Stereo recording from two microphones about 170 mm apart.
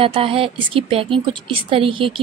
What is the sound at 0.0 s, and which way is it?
Speech, 30° right (ahead or behind).